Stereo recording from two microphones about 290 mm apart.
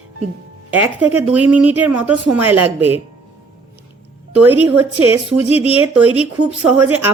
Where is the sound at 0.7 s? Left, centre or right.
Centre.